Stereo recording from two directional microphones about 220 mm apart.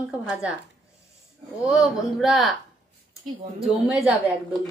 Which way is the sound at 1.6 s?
Centre (ahead or behind).